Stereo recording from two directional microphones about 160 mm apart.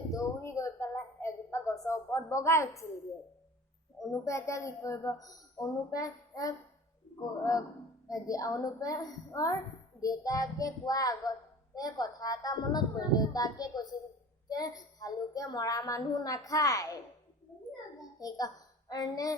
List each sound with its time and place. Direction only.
0.1 s a sound: 20° left (ahead or behind)
4.1 s a child's voice: 20° left (ahead or behind)
8.0 s a child's voice: 20° left (ahead or behind)
18.2 s a woman's voice: 25° left (ahead or behind)